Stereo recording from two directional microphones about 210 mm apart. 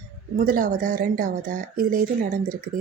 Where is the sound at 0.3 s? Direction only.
40° right (ahead or behind).